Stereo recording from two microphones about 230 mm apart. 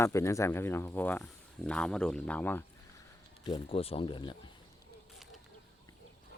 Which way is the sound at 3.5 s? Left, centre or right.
Left.